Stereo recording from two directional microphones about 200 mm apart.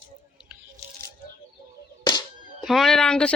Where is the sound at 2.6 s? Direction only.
Centre (ahead or behind).